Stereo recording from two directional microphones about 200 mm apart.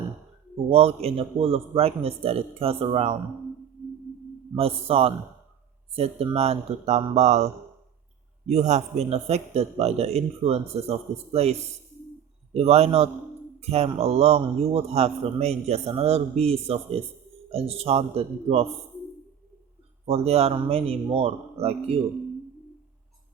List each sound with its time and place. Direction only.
0.7 s a man's voice: 30° right (ahead or behind)
4.5 s a man's voice: 30° right (ahead or behind)
12.5 s a man's voice: 30° right (ahead or behind)
20.1 s a man's voice: 30° right (ahead or behind)